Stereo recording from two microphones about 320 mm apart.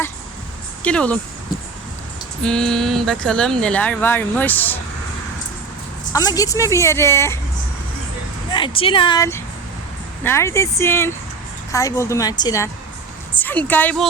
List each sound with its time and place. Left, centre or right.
0.8 s speech: centre
2.4 s speech: centre
6.1 s speech: centre
8.5 s speech: centre